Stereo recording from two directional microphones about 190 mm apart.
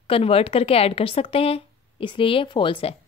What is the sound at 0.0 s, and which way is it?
A woman's voice, 30° left (ahead or behind).